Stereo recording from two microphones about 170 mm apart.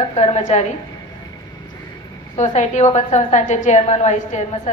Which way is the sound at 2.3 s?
40° left (ahead or behind).